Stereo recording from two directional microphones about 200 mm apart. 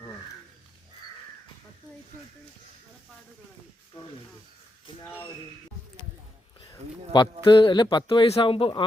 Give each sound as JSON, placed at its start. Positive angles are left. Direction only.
{"t": 6.7, "sound": "speech", "side_deg": 20}